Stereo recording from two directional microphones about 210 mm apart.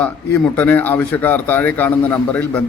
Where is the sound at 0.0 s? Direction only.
5° left (ahead or behind).